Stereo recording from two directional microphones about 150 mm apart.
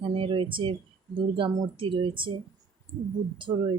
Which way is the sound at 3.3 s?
35° right (ahead or behind).